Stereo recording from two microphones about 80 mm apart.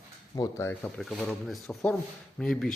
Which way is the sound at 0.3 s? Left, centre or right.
Left.